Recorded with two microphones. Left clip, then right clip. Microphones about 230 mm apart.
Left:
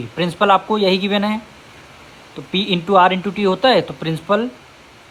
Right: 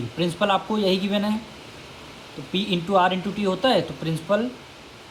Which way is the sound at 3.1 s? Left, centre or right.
Left.